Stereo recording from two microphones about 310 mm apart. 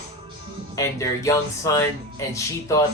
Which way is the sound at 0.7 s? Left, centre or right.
Centre.